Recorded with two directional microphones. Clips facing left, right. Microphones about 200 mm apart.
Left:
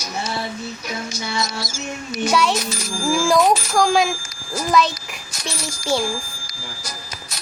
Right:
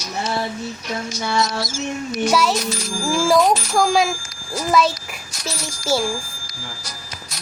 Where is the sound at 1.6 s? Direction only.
20° right (ahead or behind).